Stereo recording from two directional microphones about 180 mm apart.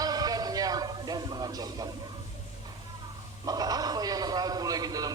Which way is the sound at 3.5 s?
20° right (ahead or behind).